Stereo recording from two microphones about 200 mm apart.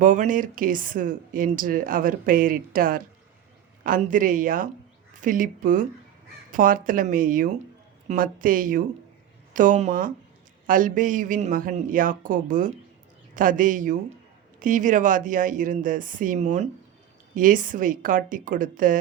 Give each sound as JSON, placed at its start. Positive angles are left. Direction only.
{"t": 0.0, "sound": "speech", "side_deg": -40}